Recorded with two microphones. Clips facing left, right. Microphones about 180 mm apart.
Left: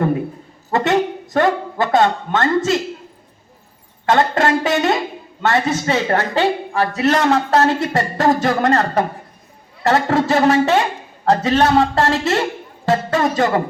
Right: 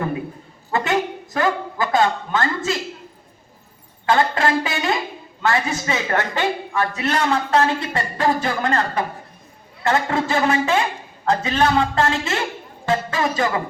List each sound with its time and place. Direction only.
0.7 s a man's voice: 40° left (ahead or behind)
4.1 s a sound: 40° left (ahead or behind)
5.4 s a man's voice: 35° left (ahead or behind)